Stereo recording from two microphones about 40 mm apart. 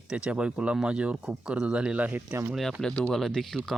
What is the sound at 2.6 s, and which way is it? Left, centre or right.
Speech, centre.